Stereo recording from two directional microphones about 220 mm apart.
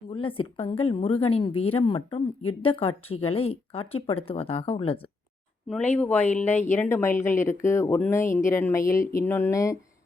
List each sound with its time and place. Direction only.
0.1 s speech: 25° left (ahead or behind)
5.6 s speech: 5° left (ahead or behind)